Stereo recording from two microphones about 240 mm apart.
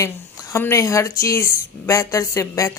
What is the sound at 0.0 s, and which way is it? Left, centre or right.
Speech, centre.